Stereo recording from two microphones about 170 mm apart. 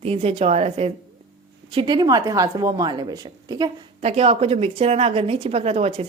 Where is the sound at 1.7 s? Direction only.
25° right (ahead or behind).